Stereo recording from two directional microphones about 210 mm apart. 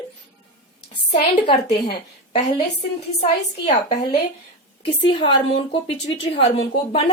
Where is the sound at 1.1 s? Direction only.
30° left (ahead or behind).